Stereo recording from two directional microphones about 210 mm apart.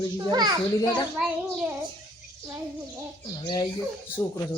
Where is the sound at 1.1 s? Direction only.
5° right (ahead or behind).